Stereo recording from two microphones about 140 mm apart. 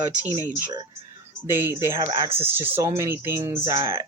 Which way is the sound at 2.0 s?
25° right (ahead or behind).